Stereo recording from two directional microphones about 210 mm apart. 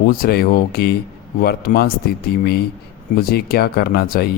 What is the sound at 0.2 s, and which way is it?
A man's voice, 45° left (ahead or behind).